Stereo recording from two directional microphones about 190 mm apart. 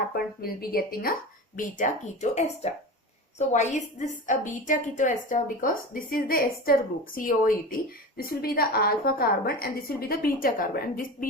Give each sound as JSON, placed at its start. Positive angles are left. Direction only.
{"t": 0.4, "sound": "a woman's voice", "side_deg": 50}
{"t": 1.5, "sound": "a woman's voice", "side_deg": 40}